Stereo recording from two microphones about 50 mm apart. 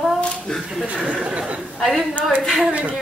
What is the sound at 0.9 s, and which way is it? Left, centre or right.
Speech, right.